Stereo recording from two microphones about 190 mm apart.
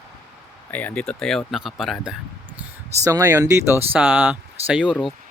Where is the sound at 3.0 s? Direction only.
15° right (ahead or behind).